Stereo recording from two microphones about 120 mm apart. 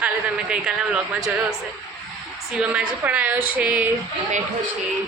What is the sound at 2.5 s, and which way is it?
A woman's voice, 10° right (ahead or behind).